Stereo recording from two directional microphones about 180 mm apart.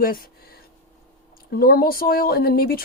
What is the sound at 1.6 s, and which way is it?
Speech, 55° left (ahead or behind).